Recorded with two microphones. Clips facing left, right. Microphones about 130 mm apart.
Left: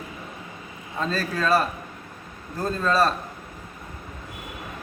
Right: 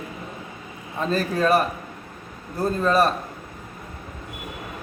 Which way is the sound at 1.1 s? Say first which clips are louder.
Right 3 dB; 15° right (ahead or behind).